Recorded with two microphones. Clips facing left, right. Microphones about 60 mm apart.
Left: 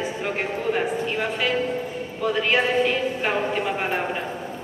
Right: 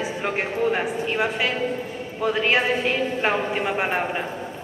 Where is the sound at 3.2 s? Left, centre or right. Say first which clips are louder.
Right 1 dB; centre.